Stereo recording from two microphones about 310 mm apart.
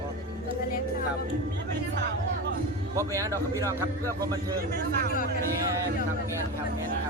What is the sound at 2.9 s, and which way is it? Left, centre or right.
Speech, centre.